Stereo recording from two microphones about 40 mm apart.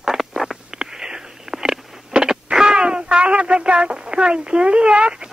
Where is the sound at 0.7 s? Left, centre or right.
Centre.